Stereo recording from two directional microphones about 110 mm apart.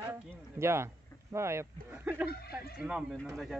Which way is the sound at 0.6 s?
25° right (ahead or behind).